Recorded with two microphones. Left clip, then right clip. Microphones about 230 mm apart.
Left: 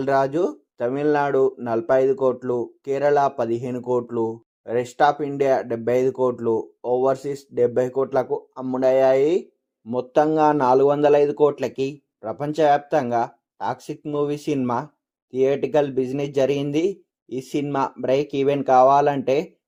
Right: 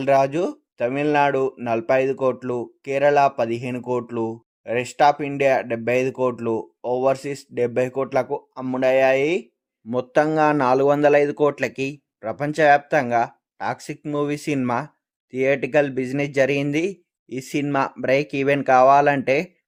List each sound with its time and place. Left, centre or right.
0.0 s a man's voice: right